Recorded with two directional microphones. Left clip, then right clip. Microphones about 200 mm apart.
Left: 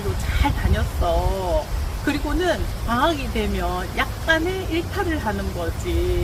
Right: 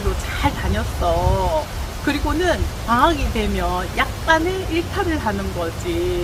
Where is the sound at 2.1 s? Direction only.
Centre (ahead or behind).